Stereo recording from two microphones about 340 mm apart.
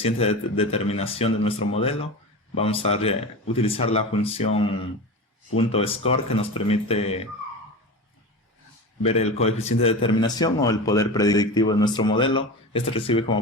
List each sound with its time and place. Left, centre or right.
0.0 s a man's voice: centre
9.0 s a man's voice: centre